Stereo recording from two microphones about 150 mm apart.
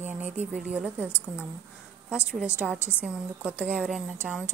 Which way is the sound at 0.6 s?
5° right (ahead or behind).